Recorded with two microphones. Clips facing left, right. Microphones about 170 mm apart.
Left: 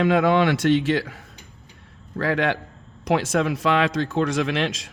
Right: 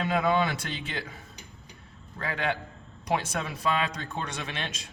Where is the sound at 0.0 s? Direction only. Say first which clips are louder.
Left 7 dB; 75° left (ahead or behind).